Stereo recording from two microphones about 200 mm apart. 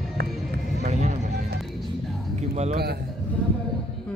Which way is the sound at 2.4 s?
35° right (ahead or behind).